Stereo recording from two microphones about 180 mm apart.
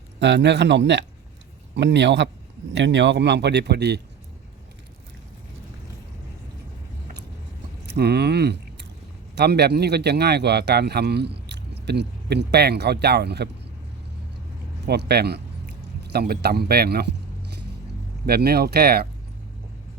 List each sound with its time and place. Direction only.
0.2 s speech: 75° right (ahead or behind)
7.9 s a man's voice: 65° right (ahead or behind)
14.8 s a man's voice: 65° right (ahead or behind)
18.3 s a man's voice: 60° right (ahead or behind)